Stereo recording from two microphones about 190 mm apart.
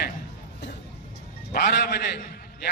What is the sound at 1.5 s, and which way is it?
Speech, 60° left (ahead or behind).